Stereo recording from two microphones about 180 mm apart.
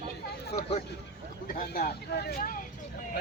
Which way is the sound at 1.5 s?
60° left (ahead or behind).